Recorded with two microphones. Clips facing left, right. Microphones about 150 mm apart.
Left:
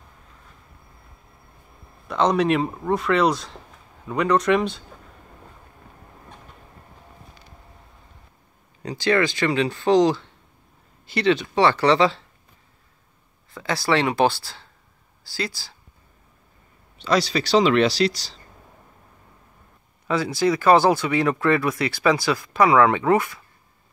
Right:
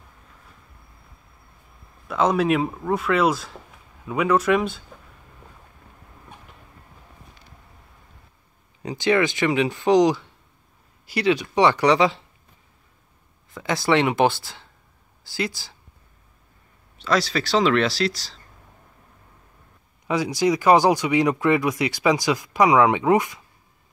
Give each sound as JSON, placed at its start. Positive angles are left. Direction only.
{"t": 2.0, "sound": "speech", "side_deg": -5}
{"t": 8.8, "sound": "speech", "side_deg": -20}
{"t": 13.6, "sound": "speech", "side_deg": -20}
{"t": 17.0, "sound": "speech", "side_deg": 0}
{"t": 20.1, "sound": "speech", "side_deg": -15}